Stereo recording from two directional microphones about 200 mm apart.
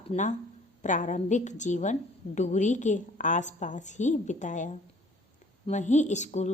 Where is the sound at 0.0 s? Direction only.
35° left (ahead or behind).